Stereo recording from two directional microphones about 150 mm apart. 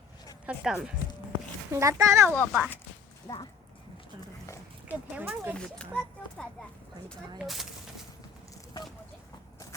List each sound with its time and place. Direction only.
0.4 s speech: 5° right (ahead or behind)
1.7 s a child's voice: 20° right (ahead or behind)
2.3 s speech: 10° left (ahead or behind)
3.3 s speech: 25° left (ahead or behind)
4.9 s speech: 10° right (ahead or behind)
5.5 s speech: 5° left (ahead or behind)